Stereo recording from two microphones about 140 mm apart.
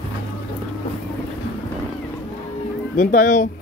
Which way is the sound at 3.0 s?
70° left (ahead or behind).